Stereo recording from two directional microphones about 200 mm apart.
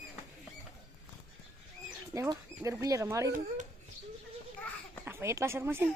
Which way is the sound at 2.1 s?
15° right (ahead or behind).